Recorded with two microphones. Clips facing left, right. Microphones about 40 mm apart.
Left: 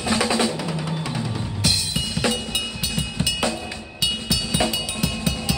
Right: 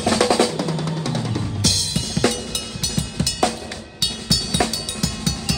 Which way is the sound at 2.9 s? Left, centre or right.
Right.